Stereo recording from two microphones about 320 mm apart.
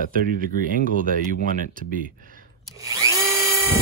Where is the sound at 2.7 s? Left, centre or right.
Centre.